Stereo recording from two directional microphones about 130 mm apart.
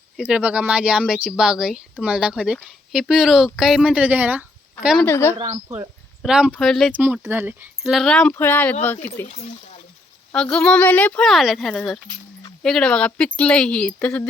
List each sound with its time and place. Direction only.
0.2 s a woman's voice: 10° right (ahead or behind)
5.0 s speech: 15° left (ahead or behind)
5.6 s speech: 25° right (ahead or behind)
6.2 s a woman's voice: 5° right (ahead or behind)
6.9 s speech: 10° right (ahead or behind)
7.8 s speech: centre (ahead or behind); by 9.2 s 15° left (ahead or behind)
9.2 s speech: 60° left (ahead or behind)
10.3 s speech: 5° left (ahead or behind)